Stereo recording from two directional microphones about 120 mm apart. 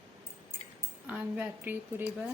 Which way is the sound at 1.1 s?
10° right (ahead or behind).